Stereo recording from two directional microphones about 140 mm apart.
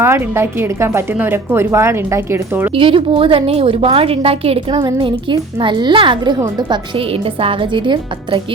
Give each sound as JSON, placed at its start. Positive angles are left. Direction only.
{"t": 0.0, "sound": "a woman's voice", "side_deg": -15}
{"t": 2.7, "sound": "a woman's voice", "side_deg": -40}